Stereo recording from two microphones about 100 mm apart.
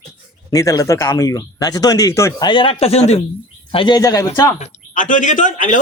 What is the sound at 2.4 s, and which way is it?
Speech, 60° left (ahead or behind).